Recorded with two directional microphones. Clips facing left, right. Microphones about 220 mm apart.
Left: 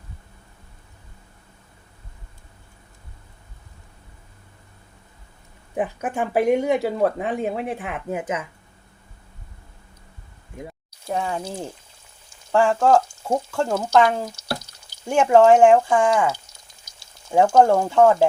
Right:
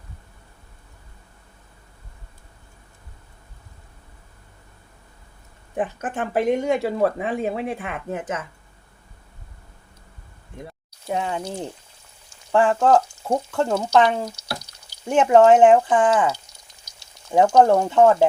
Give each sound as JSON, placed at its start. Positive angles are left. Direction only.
{"t": 5.7, "sound": "speech", "side_deg": 10}
{"t": 11.1, "sound": "speech", "side_deg": 0}